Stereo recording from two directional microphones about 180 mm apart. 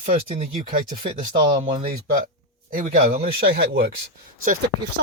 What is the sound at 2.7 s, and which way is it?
Speech, 50° right (ahead or behind).